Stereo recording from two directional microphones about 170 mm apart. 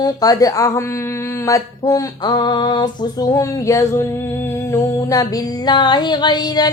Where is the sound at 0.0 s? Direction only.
20° left (ahead or behind).